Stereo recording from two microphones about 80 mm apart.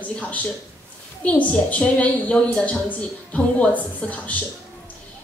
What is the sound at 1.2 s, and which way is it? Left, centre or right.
A woman's voice, centre.